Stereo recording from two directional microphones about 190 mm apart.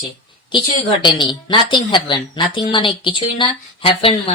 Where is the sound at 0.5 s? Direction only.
25° left (ahead or behind).